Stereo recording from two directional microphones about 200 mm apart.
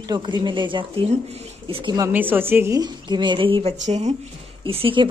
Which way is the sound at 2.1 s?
10° right (ahead or behind).